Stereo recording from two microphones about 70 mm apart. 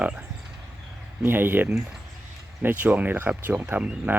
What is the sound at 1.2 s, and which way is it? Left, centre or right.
Speech, right.